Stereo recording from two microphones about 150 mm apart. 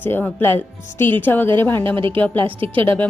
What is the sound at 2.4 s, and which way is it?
Speech, 35° right (ahead or behind).